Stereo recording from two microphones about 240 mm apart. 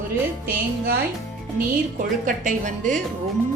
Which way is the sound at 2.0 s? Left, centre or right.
Right.